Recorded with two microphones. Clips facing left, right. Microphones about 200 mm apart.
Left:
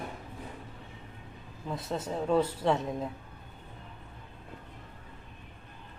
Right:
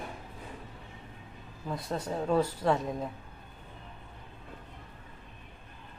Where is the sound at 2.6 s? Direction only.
Centre (ahead or behind).